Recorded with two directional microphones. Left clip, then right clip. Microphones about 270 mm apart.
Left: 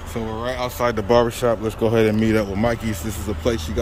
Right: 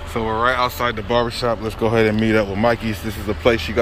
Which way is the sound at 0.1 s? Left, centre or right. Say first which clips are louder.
Right 8 dB; centre.